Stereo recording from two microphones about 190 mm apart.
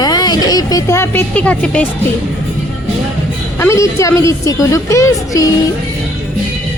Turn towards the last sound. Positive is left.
turn(degrees=15)  # may be behind; listen again after turning